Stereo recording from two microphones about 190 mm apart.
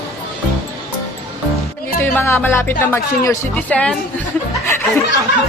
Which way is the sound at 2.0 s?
10° left (ahead or behind).